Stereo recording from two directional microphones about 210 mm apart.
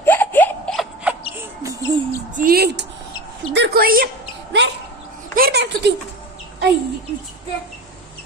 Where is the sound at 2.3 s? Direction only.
45° right (ahead or behind).